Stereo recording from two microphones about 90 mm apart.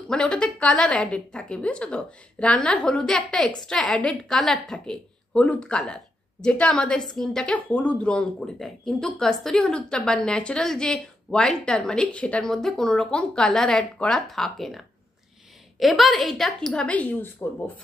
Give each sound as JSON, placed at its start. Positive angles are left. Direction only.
{"t": 0.1, "sound": "speech", "side_deg": 10}
{"t": 15.8, "sound": "a woman's voice", "side_deg": 0}
{"t": 16.8, "sound": "speech", "side_deg": 15}